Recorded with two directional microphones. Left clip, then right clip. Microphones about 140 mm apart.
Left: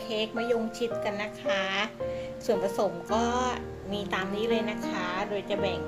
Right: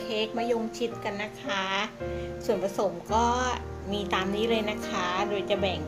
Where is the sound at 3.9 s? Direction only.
10° right (ahead or behind).